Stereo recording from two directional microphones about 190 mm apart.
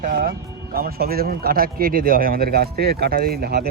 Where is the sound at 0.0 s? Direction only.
50° right (ahead or behind).